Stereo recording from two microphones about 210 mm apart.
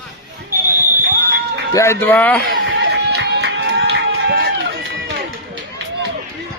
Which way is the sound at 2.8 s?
50° right (ahead or behind).